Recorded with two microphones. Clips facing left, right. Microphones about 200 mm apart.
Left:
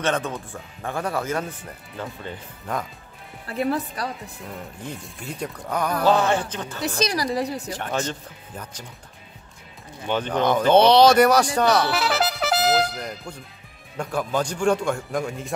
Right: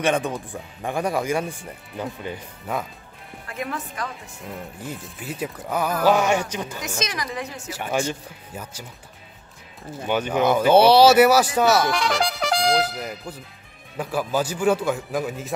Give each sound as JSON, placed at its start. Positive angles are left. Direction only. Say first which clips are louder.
{"t": 0.0, "sound": "speech", "louder": "right 2 dB", "side_deg": -15}
{"t": 3.4, "sound": "a woman's voice", "louder": "left 6 dB", "side_deg": 35}
{"t": 4.8, "sound": "a man's voice", "louder": "right 1 dB", "side_deg": -5}
{"t": 6.8, "sound": "a woman's voice", "louder": "left 5 dB", "side_deg": 35}
{"t": 7.7, "sound": "speech", "louder": "right 2 dB", "side_deg": -10}
{"t": 10.0, "sound": "speech", "louder": "right 1 dB", "side_deg": -10}
{"t": 11.9, "sound": "a man's voice", "louder": "even", "side_deg": 5}